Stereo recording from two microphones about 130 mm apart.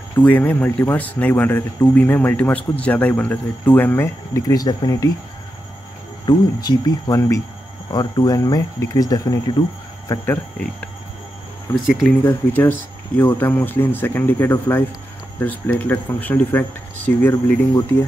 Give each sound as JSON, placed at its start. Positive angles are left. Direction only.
{"t": 0.2, "sound": "speech", "side_deg": 15}
{"t": 6.2, "sound": "speech", "side_deg": 30}
{"t": 10.2, "sound": "speech", "side_deg": 15}
{"t": 11.8, "sound": "speech", "side_deg": -5}
{"t": 12.2, "sound": "speech", "side_deg": 15}